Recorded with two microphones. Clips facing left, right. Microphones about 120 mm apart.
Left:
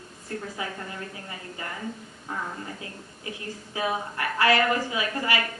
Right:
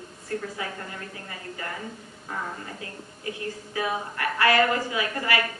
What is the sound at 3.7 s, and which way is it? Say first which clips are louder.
A woman's voice: left 1 dB; 25° left (ahead or behind).